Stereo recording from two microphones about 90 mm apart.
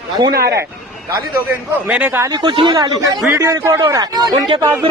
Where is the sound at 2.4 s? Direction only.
65° right (ahead or behind).